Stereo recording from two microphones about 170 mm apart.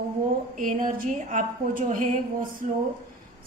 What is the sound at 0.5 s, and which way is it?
A woman's voice, 50° right (ahead or behind).